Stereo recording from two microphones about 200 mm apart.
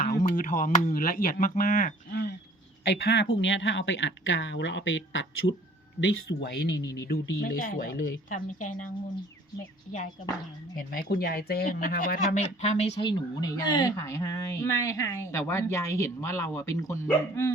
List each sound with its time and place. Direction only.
0.0 s speech: 40° left (ahead or behind)
3.1 s speech: 60° left (ahead or behind)
6.0 s speech: 60° left (ahead or behind)
6.7 s speech: 15° left (ahead or behind)
7.1 s speech: 50° left (ahead or behind)
10.8 s speech: 50° left (ahead or behind); by 17.5 s 15° left (ahead or behind)